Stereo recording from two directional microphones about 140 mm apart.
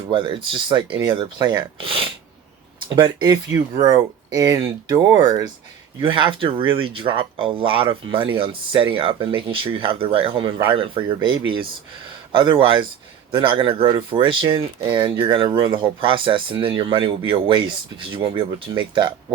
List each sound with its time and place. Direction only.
0.1 s speech: 35° right (ahead or behind)